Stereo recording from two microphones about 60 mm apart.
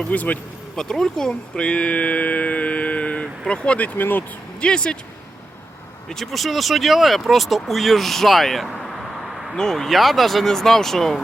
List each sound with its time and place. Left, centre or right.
0.1 s speech: left
0.8 s speech: centre; by 4.2 s left
4.6 s speech: centre
6.1 s speech: centre